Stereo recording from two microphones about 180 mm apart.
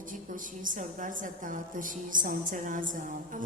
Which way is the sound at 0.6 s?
45° right (ahead or behind).